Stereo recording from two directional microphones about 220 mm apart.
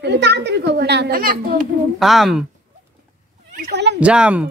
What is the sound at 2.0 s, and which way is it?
Speech, centre (ahead or behind).